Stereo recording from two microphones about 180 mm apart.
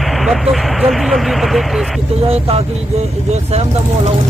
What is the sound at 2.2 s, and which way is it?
Speech, 35° right (ahead or behind).